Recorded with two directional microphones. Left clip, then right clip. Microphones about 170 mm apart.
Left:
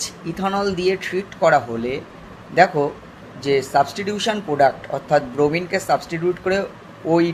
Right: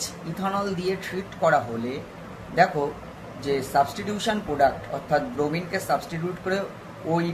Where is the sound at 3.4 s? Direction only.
50° left (ahead or behind).